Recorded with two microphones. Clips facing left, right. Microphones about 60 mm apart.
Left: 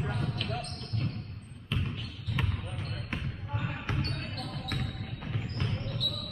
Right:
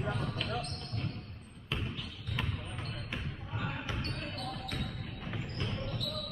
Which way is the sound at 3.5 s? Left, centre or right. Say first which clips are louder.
Left 1 dB; centre.